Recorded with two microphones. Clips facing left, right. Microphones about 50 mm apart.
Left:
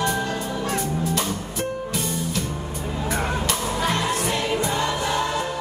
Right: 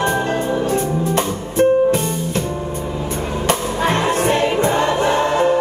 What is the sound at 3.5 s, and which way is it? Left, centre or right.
Music, right.